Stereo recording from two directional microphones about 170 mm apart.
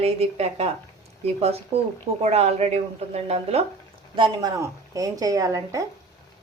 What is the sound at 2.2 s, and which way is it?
A woman's voice, 40° right (ahead or behind).